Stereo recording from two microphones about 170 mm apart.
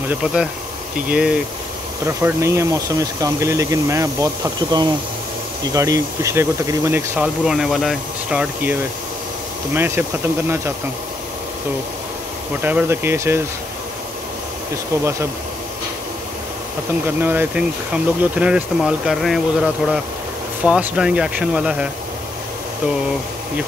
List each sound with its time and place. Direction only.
0.2 s speech: 5° right (ahead or behind)
9.8 s speech: 15° right (ahead or behind)
12.6 s speech: 10° right (ahead or behind)
17.0 s speech: 10° right (ahead or behind)